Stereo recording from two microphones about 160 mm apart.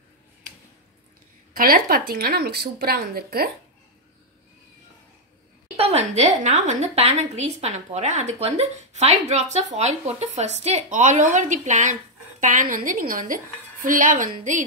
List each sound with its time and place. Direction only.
1.5 s a woman's voice: 65° right (ahead or behind)
5.8 s a woman's voice: 40° right (ahead or behind)